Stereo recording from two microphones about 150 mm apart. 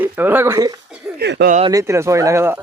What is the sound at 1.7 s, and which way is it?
Speech, 20° right (ahead or behind).